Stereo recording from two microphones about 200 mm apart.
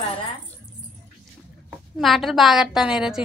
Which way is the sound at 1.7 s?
Centre (ahead or behind).